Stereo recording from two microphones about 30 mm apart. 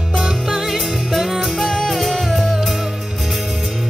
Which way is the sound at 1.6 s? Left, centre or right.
Centre.